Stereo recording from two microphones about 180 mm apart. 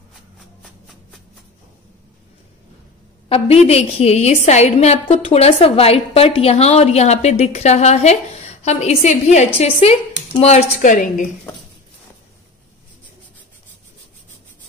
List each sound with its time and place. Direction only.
3.3 s a woman's voice: 35° left (ahead or behind)